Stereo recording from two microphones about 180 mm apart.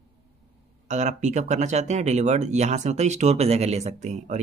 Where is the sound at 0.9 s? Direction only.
40° right (ahead or behind).